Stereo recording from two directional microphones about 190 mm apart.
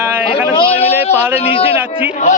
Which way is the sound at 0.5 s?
30° left (ahead or behind).